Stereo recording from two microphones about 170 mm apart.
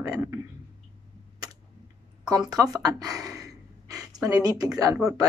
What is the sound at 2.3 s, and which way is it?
Gasp, 20° right (ahead or behind).